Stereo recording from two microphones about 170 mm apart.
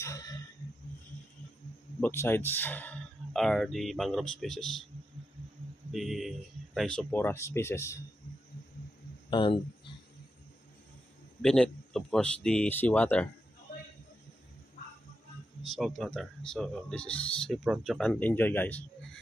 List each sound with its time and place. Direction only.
0.0 s a sound: 20° left (ahead or behind)
2.0 s speech: 15° left (ahead or behind)
5.9 s speech: centre (ahead or behind); by 8.0 s 15° left (ahead or behind)
9.3 s speech: 30° left (ahead or behind)
11.4 s speech: 5° left (ahead or behind)
15.7 s speech: centre (ahead or behind)